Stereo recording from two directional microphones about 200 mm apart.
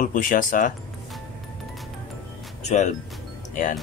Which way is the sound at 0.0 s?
40° left (ahead or behind).